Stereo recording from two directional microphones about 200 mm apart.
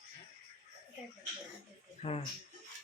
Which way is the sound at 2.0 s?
30° left (ahead or behind).